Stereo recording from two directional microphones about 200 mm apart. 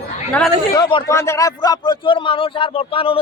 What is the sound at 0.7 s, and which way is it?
A man's voice, 20° left (ahead or behind).